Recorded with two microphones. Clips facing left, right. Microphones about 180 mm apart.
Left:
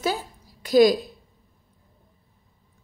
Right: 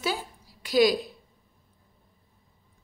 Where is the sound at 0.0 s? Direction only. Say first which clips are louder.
Left 4 dB; 45° left (ahead or behind).